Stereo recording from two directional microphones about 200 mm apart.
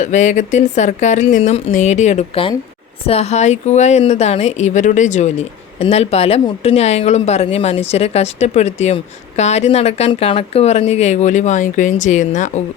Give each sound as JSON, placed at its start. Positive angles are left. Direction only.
{"t": 0.0, "sound": "speech", "side_deg": 35}